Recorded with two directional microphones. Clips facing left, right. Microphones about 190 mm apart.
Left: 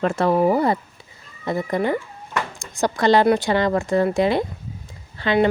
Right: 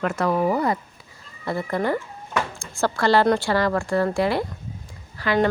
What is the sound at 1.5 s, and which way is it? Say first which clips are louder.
A woman's voice: left 2 dB; 20° left (ahead or behind).